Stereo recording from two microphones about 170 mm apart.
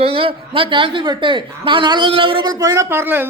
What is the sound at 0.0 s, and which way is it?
A woman's voice, 35° right (ahead or behind).